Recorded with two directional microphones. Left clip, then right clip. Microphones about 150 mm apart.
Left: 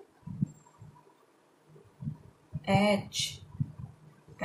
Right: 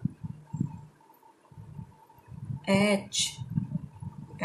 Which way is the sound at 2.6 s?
20° right (ahead or behind).